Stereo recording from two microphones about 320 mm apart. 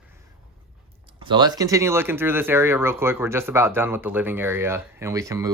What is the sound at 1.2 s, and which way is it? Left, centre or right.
Speech, centre.